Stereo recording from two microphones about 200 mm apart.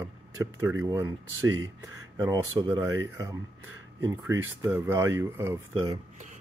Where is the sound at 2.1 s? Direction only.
20° right (ahead or behind).